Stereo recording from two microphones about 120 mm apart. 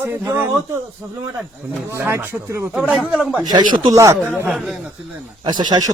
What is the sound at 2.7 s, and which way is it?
Speech, 10° right (ahead or behind).